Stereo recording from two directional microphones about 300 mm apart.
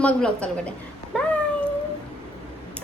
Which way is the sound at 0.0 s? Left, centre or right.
Centre.